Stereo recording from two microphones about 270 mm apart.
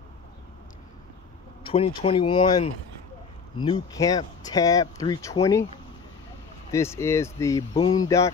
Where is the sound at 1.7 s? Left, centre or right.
Centre.